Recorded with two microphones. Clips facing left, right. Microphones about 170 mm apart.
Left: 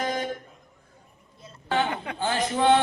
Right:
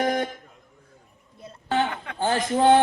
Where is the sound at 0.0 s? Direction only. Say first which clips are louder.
Right 5 dB; 60° right (ahead or behind).